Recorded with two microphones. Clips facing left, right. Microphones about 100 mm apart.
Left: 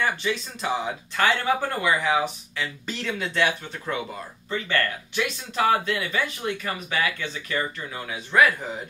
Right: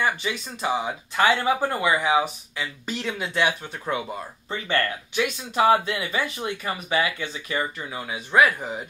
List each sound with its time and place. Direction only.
0.0 s speech: 15° right (ahead or behind)